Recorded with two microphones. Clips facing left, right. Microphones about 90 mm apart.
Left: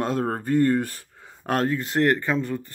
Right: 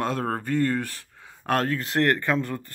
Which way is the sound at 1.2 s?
25° left (ahead or behind).